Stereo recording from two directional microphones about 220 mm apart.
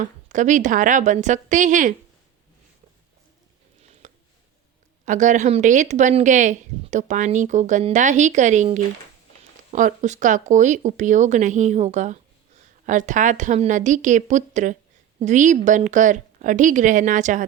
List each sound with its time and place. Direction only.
0.0 s speech: 35° right (ahead or behind)
4.0 s a sound: 35° right (ahead or behind)
5.0 s speech: 35° right (ahead or behind)